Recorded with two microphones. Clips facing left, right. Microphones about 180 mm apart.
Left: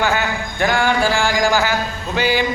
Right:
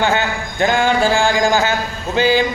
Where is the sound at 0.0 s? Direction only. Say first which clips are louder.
Right 2 dB; 25° right (ahead or behind).